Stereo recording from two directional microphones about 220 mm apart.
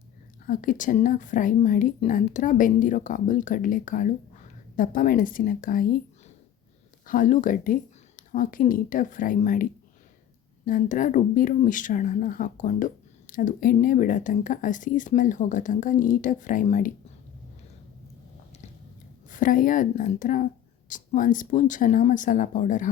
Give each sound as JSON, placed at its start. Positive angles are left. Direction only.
{"t": 0.4, "sound": "speech", "side_deg": 35}
{"t": 7.1, "sound": "speech", "side_deg": 35}
{"t": 10.7, "sound": "speech", "side_deg": 35}
{"t": 19.3, "sound": "speech", "side_deg": 35}